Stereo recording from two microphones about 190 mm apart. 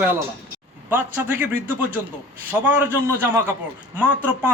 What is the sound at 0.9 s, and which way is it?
Speech, 10° right (ahead or behind).